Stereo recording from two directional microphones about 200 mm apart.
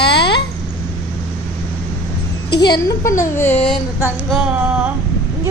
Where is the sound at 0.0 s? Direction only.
55° left (ahead or behind).